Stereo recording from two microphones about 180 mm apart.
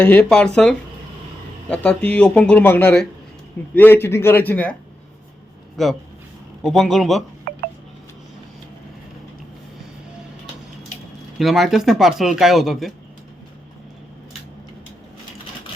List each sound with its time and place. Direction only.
0.0 s speech: 10° left (ahead or behind)
7.5 s a sound: 60° right (ahead or behind)
11.3 s speech: centre (ahead or behind)